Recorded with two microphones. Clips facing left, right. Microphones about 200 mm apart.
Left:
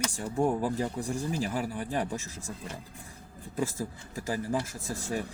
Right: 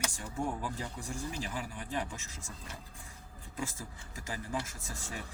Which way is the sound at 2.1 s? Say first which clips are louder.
Left 10 dB; 35° left (ahead or behind).